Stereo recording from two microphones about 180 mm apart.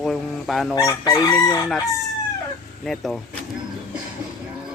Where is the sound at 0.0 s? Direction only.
Centre (ahead or behind).